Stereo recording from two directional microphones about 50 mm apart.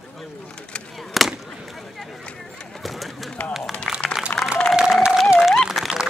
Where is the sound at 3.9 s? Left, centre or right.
Centre.